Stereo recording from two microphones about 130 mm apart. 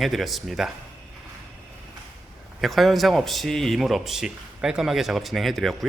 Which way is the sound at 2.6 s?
Centre (ahead or behind).